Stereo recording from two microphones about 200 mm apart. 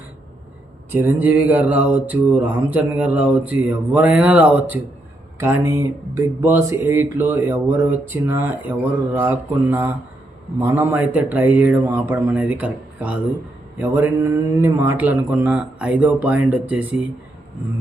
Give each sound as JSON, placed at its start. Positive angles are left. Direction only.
{"t": 0.9, "sound": "mantra", "side_deg": -10}